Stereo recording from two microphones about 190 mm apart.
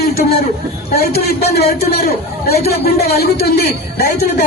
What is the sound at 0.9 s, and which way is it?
A man's voice, 55° left (ahead or behind).